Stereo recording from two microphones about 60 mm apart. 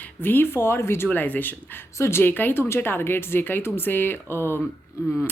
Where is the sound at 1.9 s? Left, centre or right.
Left.